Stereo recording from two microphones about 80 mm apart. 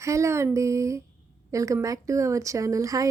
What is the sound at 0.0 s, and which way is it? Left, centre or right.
A woman's voice, right.